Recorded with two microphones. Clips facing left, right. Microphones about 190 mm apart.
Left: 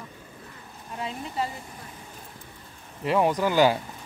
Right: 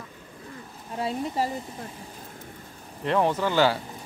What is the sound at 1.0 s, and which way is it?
Speech, 35° right (ahead or behind).